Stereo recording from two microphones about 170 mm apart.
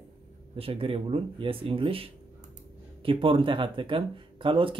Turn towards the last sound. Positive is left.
turn(degrees=-30)  # may be behind; listen again after turning